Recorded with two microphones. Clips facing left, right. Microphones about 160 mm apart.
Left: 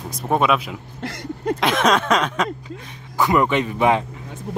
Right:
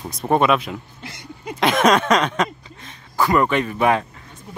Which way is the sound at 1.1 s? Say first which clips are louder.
Left 10 dB; 55° left (ahead or behind).